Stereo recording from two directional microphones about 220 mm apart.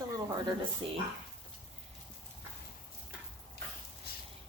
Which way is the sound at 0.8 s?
25° right (ahead or behind).